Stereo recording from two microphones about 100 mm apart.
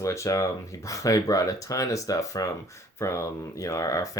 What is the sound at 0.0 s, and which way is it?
Speech, 30° left (ahead or behind).